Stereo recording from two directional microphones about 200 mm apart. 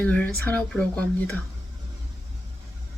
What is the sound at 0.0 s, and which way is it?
Speech, 5° left (ahead or behind).